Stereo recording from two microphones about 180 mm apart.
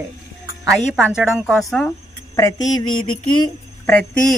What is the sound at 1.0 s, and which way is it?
Speech, 5° right (ahead or behind).